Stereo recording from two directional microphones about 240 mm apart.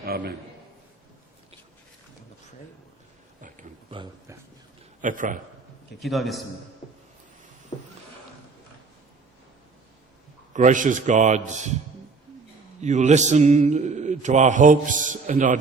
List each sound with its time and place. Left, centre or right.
0.0 s a man's voice: right
3.9 s speech: centre
4.9 s a man's voice: right
6.0 s a man's voice: centre
7.7 s vehicle: centre
10.5 s a man's voice: right
12.8 s mantra: right